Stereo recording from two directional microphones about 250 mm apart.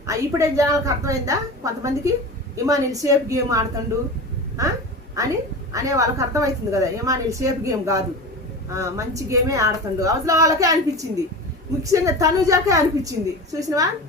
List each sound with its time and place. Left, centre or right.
0.0 s a woman's voice: centre